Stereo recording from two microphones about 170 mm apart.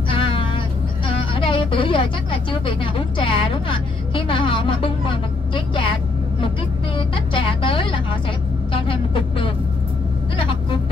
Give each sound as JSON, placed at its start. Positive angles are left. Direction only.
{"t": 0.1, "sound": "cat", "side_deg": 30}
{"t": 1.0, "sound": "speech", "side_deg": 30}
{"t": 7.0, "sound": "speech", "side_deg": 30}